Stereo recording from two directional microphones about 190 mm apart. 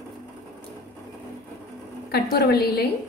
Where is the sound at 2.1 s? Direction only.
55° left (ahead or behind).